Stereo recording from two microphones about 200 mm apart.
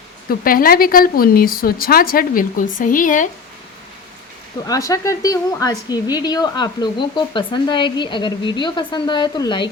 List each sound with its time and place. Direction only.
0.3 s a woman's voice: 45° left (ahead or behind)
4.6 s a woman's voice: 15° left (ahead or behind)